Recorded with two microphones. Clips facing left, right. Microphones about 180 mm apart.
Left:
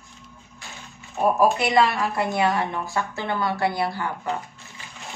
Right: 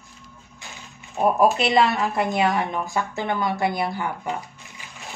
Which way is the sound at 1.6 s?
20° right (ahead or behind).